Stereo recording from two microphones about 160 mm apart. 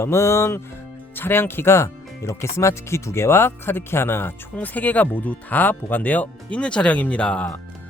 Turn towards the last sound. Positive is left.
turn(degrees=5)  # may be behind; listen again after turning